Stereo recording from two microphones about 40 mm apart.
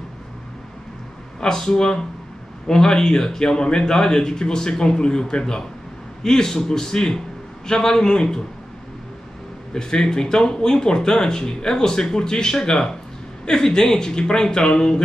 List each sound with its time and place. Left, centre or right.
1.4 s speech: centre
9.8 s speech: centre